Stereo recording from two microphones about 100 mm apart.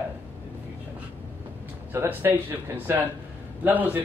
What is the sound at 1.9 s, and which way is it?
A man's voice, 25° right (ahead or behind).